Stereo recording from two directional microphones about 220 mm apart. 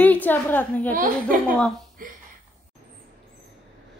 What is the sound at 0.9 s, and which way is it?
Speech, 40° right (ahead or behind).